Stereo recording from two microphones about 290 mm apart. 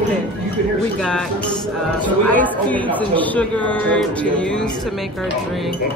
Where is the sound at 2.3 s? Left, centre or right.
Centre.